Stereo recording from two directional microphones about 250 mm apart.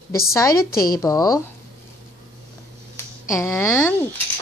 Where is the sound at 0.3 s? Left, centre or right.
Centre.